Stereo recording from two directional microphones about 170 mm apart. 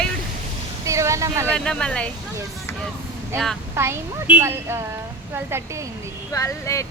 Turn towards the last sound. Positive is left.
turn(degrees=20)  # may be behind; listen again after turning